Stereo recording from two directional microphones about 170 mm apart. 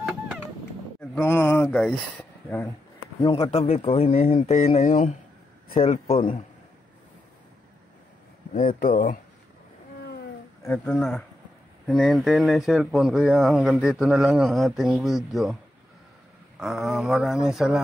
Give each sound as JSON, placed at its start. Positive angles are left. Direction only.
{"t": 1.1, "sound": "speech", "side_deg": 10}
{"t": 3.2, "sound": "speech", "side_deg": 35}
{"t": 8.5, "sound": "speech", "side_deg": 55}
{"t": 10.6, "sound": "speech", "side_deg": 10}
{"t": 16.5, "sound": "speech", "side_deg": 0}